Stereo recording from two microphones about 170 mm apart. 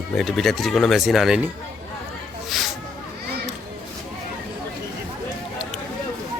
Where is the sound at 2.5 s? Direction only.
Centre (ahead or behind).